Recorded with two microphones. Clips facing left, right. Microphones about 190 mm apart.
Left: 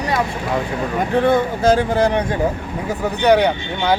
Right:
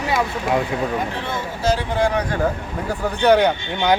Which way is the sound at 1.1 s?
55° left (ahead or behind).